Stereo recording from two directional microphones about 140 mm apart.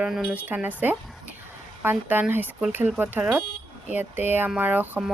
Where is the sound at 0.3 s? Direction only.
10° right (ahead or behind).